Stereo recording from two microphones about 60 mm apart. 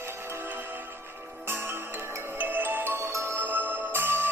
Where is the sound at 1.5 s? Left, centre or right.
Right.